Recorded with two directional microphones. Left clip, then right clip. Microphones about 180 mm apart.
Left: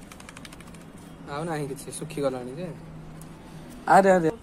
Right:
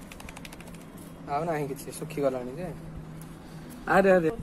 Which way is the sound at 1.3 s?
35° left (ahead or behind).